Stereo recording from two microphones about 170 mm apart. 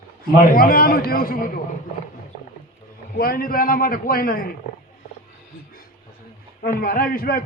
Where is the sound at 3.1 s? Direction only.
60° left (ahead or behind).